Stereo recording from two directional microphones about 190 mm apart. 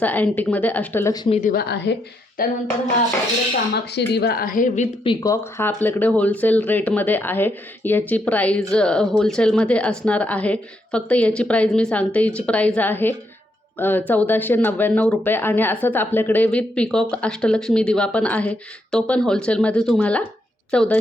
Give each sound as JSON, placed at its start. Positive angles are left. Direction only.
{"t": 0.0, "sound": "speech", "side_deg": 10}
{"t": 1.1, "sound": "speech", "side_deg": 25}
{"t": 1.5, "sound": "a woman's voice", "side_deg": 60}
{"t": 2.4, "sound": "a woman's voice", "side_deg": 50}
{"t": 3.9, "sound": "a woman's voice", "side_deg": 60}
{"t": 5.2, "sound": "speech", "side_deg": 15}